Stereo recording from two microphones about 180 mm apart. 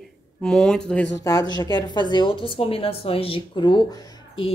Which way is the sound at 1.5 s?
25° left (ahead or behind).